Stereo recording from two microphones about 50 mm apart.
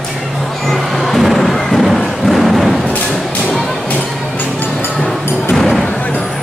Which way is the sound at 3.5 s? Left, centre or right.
Centre.